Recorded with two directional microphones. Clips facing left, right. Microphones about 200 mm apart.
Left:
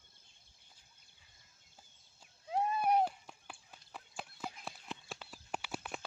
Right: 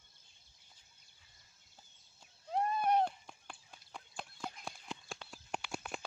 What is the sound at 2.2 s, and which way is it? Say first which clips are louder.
Horse: even; 5° left (ahead or behind).